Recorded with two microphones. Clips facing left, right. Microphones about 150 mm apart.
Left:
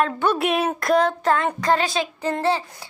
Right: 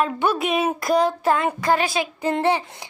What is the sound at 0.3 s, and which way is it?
A woman's voice, centre (ahead or behind).